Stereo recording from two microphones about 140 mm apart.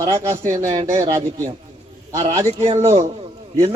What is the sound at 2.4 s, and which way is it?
Speech, 45° right (ahead or behind).